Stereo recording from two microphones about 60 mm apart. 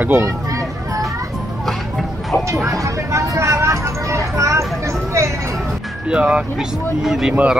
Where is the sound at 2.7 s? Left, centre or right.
Right.